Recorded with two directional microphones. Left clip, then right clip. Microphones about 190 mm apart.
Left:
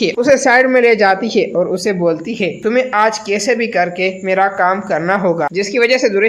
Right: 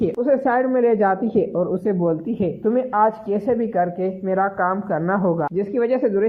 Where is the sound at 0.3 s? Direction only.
25° left (ahead or behind).